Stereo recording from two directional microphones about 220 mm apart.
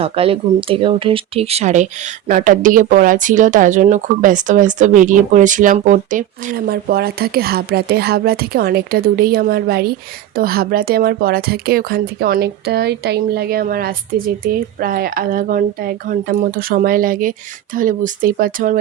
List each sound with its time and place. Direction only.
0.0 s speech: 25° right (ahead or behind)